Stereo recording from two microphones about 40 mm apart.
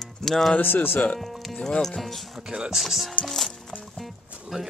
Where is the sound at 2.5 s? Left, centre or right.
Centre.